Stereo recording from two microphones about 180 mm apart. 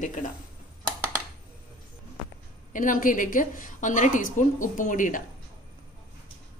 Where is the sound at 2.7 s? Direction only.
50° left (ahead or behind).